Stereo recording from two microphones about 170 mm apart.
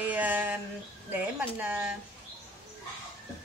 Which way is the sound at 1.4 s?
10° right (ahead or behind).